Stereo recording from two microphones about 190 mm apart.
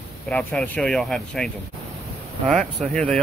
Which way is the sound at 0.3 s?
5° left (ahead or behind).